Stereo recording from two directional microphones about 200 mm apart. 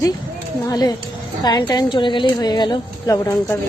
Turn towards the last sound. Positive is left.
turn(degrees=15)  # may be behind; listen again after turning